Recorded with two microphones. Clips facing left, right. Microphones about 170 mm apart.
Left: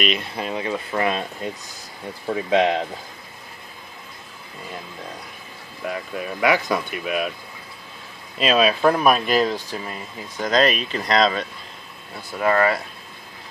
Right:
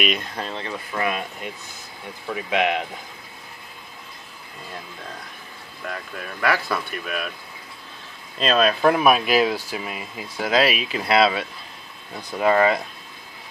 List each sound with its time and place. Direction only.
0.2 s speech: 10° left (ahead or behind)
0.9 s speech: 30° left (ahead or behind)
6.1 s speech: 15° left (ahead or behind)
8.4 s speech: 5° left (ahead or behind)
8.9 s speech: 5° right (ahead or behind)
12.2 s speech: 20° right (ahead or behind)